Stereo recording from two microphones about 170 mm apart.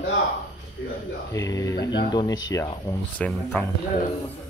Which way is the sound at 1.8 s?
90° left.